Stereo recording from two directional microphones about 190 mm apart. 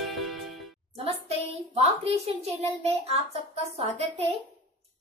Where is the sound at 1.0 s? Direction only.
30° right (ahead or behind).